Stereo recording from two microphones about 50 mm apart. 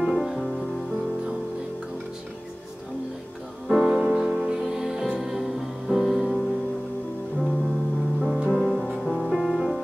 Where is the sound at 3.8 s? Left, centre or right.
Centre.